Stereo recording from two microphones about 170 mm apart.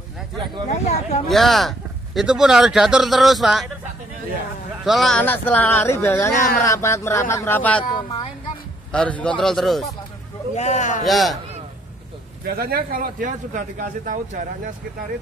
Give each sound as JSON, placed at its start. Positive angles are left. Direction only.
{"t": 0.7, "sound": "speech", "side_deg": 40}
{"t": 1.3, "sound": "speech", "side_deg": 0}
{"t": 4.8, "sound": "speech", "side_deg": 0}
{"t": 8.9, "sound": "speech", "side_deg": 5}
{"t": 10.5, "sound": "speech", "side_deg": 40}
{"t": 11.1, "sound": "speech", "side_deg": 0}
{"t": 12.4, "sound": "speech", "side_deg": -65}